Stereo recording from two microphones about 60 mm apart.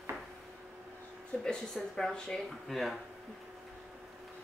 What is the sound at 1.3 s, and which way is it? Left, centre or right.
Speech, left.